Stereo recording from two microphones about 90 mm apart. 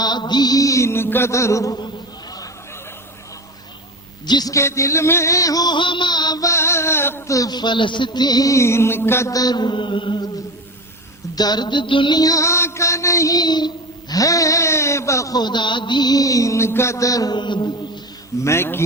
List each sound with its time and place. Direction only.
0.0 s mantra: 55° left (ahead or behind); by 1.8 s 35° left (ahead or behind)
4.3 s a woman's voice: 50° left (ahead or behind)
4.5 s mantra: 35° left (ahead or behind); by 6.4 s 50° left (ahead or behind)
6.4 s mantra: 30° left (ahead or behind)
9.3 s mantra: 45° left (ahead or behind); by 10.2 s 65° left (ahead or behind)
11.3 s mantra: 50° left (ahead or behind)
12.2 s mantra: 35° left (ahead or behind)
15.4 s mantra: 55° left (ahead or behind); by 17.3 s 40° left (ahead or behind)
17.3 s mantra: 55° left (ahead or behind)
18.4 s a man's voice: 30° left (ahead or behind)